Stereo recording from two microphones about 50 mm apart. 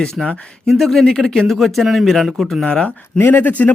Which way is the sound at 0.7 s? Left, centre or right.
Centre.